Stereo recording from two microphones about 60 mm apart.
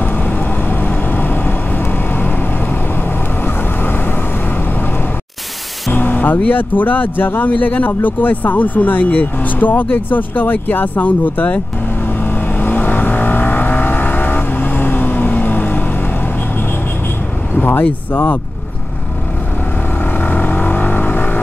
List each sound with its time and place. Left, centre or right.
0.0 s vehicle: left
5.9 s speech: left
12.2 s vehicle: left
17.6 s vehicle: left
18.1 s speech: left
20.2 s vehicle: left